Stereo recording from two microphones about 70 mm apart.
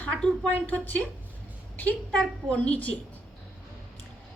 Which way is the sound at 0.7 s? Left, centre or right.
Left.